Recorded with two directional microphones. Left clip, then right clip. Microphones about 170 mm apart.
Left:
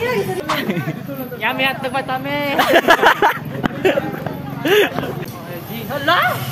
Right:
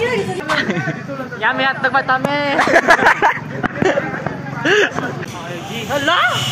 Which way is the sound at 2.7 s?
65° left (ahead or behind).